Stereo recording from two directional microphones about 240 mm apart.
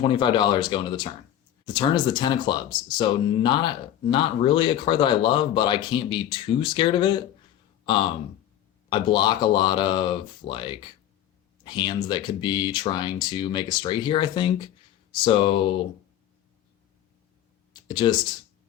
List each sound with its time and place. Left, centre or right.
0.0 s speech: centre
8.9 s speech: centre
17.7 s a sound: centre